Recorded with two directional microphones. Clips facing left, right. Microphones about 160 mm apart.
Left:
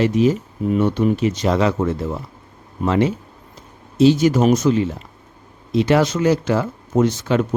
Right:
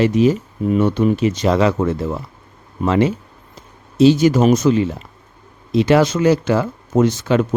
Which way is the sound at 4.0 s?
90° right.